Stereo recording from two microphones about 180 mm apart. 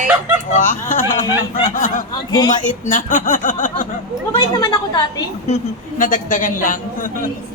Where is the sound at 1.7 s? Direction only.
45° left (ahead or behind).